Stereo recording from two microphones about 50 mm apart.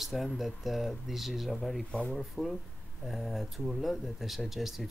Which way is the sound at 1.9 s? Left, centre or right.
Left.